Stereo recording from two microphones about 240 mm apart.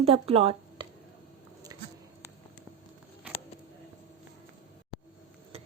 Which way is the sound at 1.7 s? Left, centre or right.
Centre.